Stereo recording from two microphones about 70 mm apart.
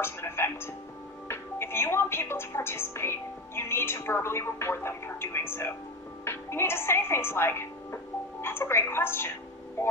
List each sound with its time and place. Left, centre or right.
0.0 s a woman's voice: left